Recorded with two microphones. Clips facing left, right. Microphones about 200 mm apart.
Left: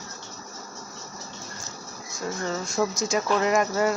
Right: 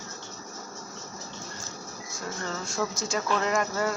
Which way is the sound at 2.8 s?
15° left (ahead or behind).